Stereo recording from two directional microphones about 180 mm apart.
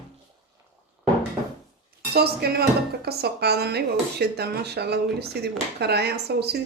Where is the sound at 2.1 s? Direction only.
60° right (ahead or behind).